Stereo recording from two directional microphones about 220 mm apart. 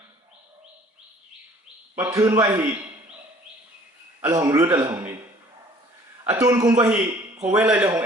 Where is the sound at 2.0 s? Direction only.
15° right (ahead or behind).